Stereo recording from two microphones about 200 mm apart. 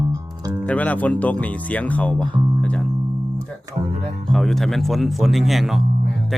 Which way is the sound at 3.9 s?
35° right (ahead or behind).